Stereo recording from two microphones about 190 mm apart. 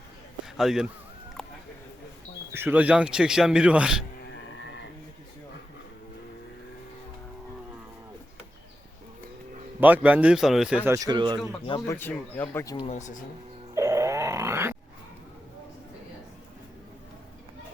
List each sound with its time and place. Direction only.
0.4 s speech: centre (ahead or behind)
1.4 s a sound: centre (ahead or behind)
2.5 s a man's voice: 10° right (ahead or behind)
4.3 s frog: 70° left (ahead or behind)
9.8 s a man's voice: 10° right (ahead or behind)
10.8 s speech: 15° right (ahead or behind)
11.6 s speech: 25° left (ahead or behind)
11.9 s speech: 10° left (ahead or behind)
12.8 s speech: 35° left (ahead or behind)
13.7 s grunt: 15° right (ahead or behind)